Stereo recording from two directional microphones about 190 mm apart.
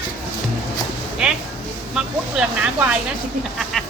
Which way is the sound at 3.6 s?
Centre (ahead or behind).